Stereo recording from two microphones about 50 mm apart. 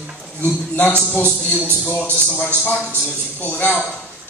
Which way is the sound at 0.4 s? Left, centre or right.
Left.